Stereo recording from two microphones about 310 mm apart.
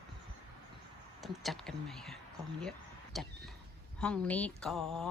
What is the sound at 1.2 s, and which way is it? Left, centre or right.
Speech, centre.